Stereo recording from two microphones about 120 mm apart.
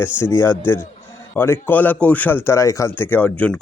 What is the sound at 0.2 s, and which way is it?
A man's voice, 20° left (ahead or behind).